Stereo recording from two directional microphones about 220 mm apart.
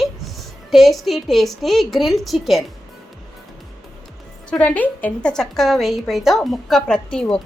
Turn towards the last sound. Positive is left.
turn(degrees=5)  # may be behind; listen again after turning